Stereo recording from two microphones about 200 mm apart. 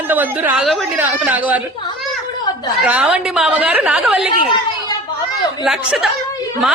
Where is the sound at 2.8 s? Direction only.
5° right (ahead or behind).